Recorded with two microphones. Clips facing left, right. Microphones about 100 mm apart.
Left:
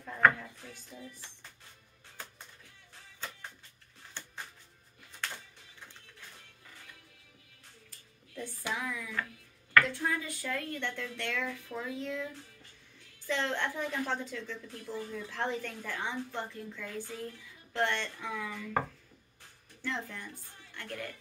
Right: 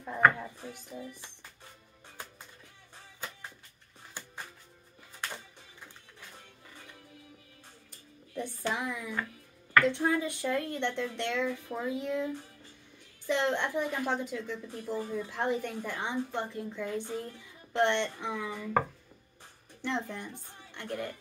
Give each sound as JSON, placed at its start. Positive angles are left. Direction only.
{"t": 0.4, "sound": "speech", "side_deg": -20}
{"t": 4.2, "sound": "music", "side_deg": -10}
{"t": 8.7, "sound": "speech", "side_deg": -20}
{"t": 13.3, "sound": "a woman's voice", "side_deg": -15}
{"t": 19.8, "sound": "speech", "side_deg": -20}